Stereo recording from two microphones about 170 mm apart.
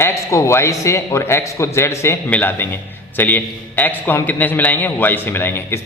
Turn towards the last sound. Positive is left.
turn(degrees=15)  # may be behind; listen again after turning